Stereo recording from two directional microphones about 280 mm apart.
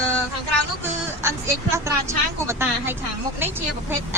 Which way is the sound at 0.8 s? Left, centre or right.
Centre.